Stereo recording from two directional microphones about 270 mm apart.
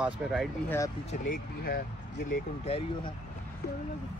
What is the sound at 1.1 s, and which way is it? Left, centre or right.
Speech, left.